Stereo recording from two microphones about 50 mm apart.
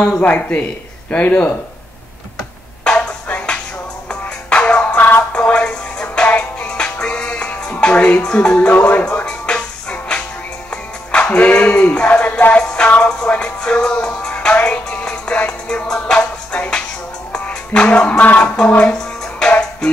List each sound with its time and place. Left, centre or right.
0.0 s speech: left
2.8 s a sound: left
4.1 s music: left
4.9 s music: left
17.3 s speech: left